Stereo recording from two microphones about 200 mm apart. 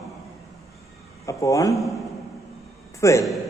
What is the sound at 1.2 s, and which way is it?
Speech, 15° left (ahead or behind).